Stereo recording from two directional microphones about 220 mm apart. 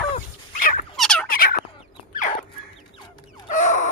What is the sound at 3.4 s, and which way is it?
Chicken, 35° left (ahead or behind).